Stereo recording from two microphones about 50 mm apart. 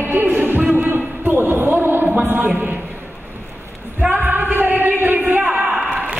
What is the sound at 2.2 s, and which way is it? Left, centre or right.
Speech, right.